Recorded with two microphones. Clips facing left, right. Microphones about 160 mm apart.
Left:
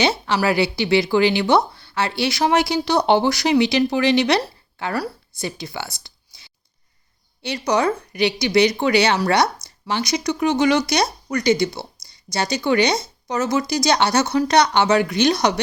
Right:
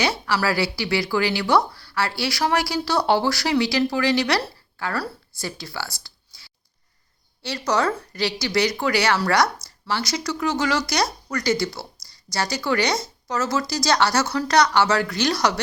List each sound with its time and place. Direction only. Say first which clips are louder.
0.0 s speech: left 3 dB; 25° left (ahead or behind)